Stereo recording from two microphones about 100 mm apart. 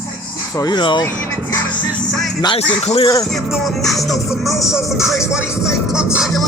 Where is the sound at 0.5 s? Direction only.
45° left (ahead or behind).